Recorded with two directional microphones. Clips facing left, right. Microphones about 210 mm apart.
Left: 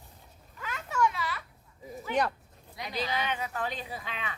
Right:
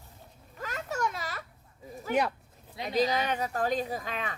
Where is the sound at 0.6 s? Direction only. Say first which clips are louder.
Left 3 dB; 40° right (ahead or behind).